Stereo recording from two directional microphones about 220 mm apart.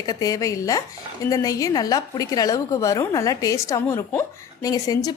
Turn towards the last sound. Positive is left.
turn(degrees=15)  # may be behind; listen again after turning